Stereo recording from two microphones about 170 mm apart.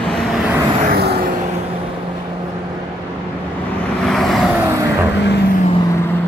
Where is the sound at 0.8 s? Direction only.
65° right (ahead or behind).